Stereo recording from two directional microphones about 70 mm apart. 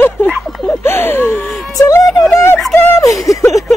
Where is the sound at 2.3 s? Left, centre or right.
Left.